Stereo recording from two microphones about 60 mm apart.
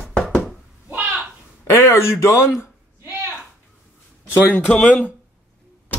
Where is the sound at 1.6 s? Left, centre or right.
Left.